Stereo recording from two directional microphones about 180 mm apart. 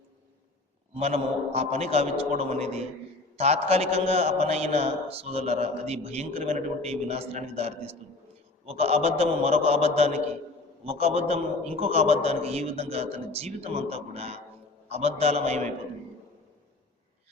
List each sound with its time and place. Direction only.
0.9 s a man's voice: 35° right (ahead or behind)